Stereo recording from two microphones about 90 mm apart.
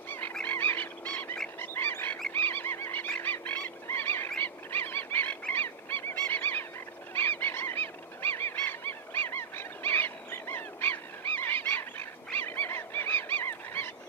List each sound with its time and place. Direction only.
0.3 s frog: 15° left (ahead or behind)
1.6 s goose: 25° left (ahead or behind)
2.3 s a sound: 20° left (ahead or behind)
3.2 s frog: 20° left (ahead or behind)
4.4 s a sound: 20° left (ahead or behind)
7.2 s goose: 20° left (ahead or behind)